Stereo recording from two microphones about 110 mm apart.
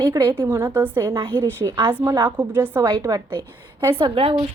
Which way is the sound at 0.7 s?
15° right (ahead or behind).